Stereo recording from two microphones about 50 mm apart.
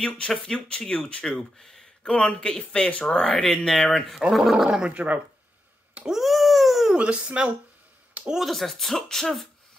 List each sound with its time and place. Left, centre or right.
0.3 s speech: centre
1.2 s speech: centre
4.3 s speech: centre
4.9 s speech: right
6.0 s dog: centre
7.0 s speech: right
8.5 s speech: centre